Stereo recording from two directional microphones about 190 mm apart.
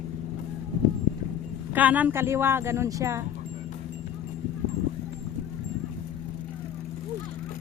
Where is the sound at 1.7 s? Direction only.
10° right (ahead or behind).